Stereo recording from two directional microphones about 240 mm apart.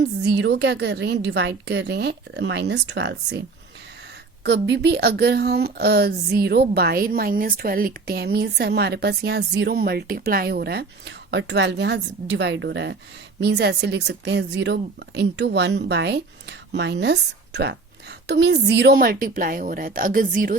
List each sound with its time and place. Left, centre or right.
0.0 s a woman's voice: right
4.4 s a woman's voice: right